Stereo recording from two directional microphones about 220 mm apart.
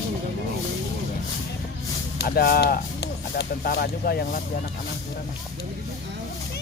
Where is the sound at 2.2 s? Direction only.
45° left (ahead or behind).